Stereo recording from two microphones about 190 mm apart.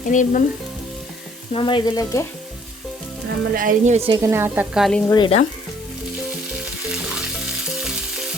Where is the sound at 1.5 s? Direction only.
25° left (ahead or behind).